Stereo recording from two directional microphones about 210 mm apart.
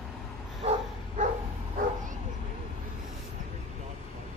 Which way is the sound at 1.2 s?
35° right (ahead or behind).